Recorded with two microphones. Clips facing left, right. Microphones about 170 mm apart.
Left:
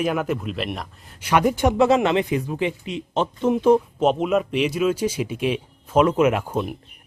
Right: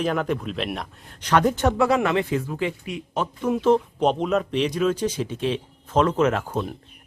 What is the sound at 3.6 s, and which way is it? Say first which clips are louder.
Speech: left 2 dB; 10° left (ahead or behind).